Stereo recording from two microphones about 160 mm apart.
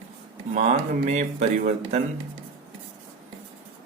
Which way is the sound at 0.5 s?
45° right (ahead or behind).